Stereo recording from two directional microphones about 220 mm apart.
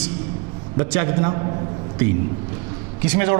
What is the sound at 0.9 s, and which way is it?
Speech, 15° right (ahead or behind).